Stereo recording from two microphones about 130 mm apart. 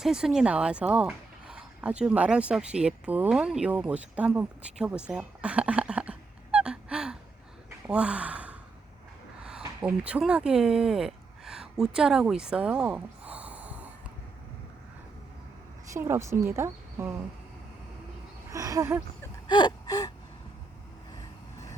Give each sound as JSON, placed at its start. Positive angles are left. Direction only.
{"t": 0.0, "sound": "speech", "side_deg": -5}
{"t": 16.0, "sound": "a woman's voice", "side_deg": -20}
{"t": 18.5, "sound": "a sound", "side_deg": -25}
{"t": 19.5, "sound": "gasp", "side_deg": 35}